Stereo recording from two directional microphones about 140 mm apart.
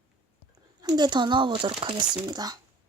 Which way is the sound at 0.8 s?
30° right (ahead or behind).